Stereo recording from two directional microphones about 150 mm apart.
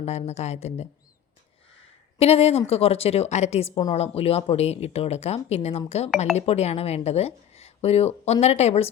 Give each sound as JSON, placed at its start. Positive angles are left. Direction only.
{"t": 0.0, "sound": "speech", "side_deg": 45}
{"t": 2.1, "sound": "speech", "side_deg": 40}